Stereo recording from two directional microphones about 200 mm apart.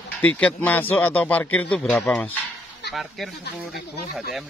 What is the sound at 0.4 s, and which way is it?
A man's voice, 5° left (ahead or behind).